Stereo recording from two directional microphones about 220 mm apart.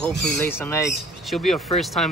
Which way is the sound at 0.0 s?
5° left (ahead or behind).